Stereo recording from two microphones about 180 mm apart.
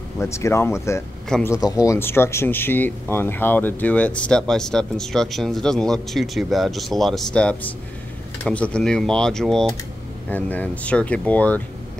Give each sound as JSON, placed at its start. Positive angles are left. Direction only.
{"t": 0.2, "sound": "speech", "side_deg": 15}